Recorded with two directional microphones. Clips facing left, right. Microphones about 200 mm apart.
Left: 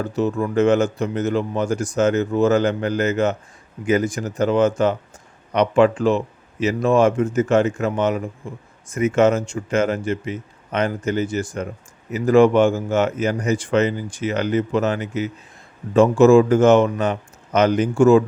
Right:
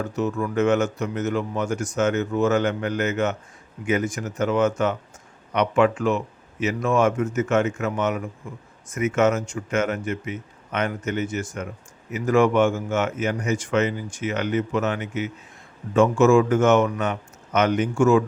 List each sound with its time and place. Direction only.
0.0 s speech: 35° left (ahead or behind)